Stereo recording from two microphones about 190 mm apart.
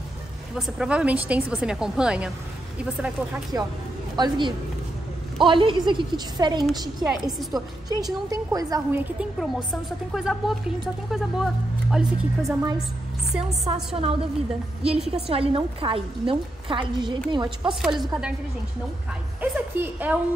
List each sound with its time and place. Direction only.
0.6 s a woman's voice: centre (ahead or behind)
4.2 s a woman's voice: 25° right (ahead or behind); by 12.5 s centre (ahead or behind)
13.4 s a woman's voice: 30° right (ahead or behind)
14.8 s a woman's voice: 5° right (ahead or behind)
15.2 s a woman's voice: 30° right (ahead or behind)
17.8 s a woman's voice: 5° right (ahead or behind)
19.4 s a woman's voice: 10° right (ahead or behind)